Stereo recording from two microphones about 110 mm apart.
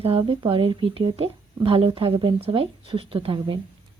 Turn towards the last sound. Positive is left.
turn(degrees=-55)  # may be behind; listen again after turning